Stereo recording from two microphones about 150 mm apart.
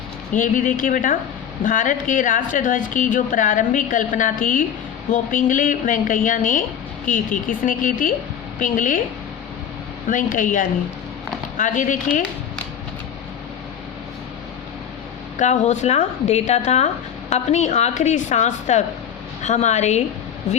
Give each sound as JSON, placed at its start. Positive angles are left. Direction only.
{"t": 0.3, "sound": "a woman's voice", "side_deg": 60}
{"t": 10.1, "sound": "speech", "side_deg": 60}
{"t": 15.4, "sound": "speech", "side_deg": 50}